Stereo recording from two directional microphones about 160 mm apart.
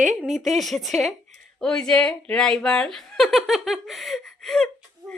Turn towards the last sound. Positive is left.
turn(degrees=5)  # may be behind; listen again after turning